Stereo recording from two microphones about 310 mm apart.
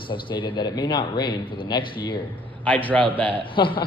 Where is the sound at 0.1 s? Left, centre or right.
Centre.